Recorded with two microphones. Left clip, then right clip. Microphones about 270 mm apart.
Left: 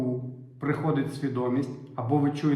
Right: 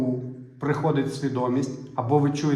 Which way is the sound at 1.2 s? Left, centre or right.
Centre.